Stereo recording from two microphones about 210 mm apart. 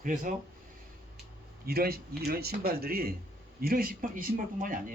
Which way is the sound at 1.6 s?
45° right (ahead or behind).